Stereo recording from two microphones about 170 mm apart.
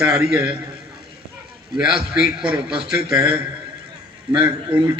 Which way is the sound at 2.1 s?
5° right (ahead or behind).